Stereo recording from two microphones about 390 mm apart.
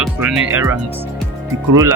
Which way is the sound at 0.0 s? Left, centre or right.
Centre.